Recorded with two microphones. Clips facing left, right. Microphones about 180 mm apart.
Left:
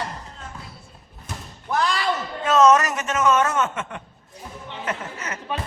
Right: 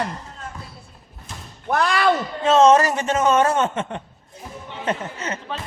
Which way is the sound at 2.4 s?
30° right (ahead or behind).